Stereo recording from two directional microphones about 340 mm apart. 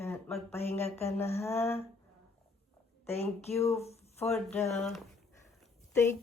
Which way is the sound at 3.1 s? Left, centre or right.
Centre.